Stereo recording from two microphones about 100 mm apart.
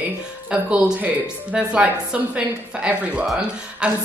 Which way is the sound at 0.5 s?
10° right (ahead or behind).